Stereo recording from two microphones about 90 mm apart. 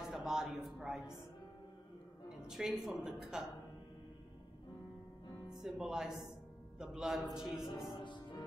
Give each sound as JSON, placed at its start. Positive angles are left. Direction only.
{"t": 0.0, "sound": "a sound", "side_deg": -5}
{"t": 0.7, "sound": "speech", "side_deg": -5}
{"t": 2.2, "sound": "a woman's voice", "side_deg": -5}
{"t": 5.6, "sound": "speech", "side_deg": -5}
{"t": 8.0, "sound": "music", "side_deg": 60}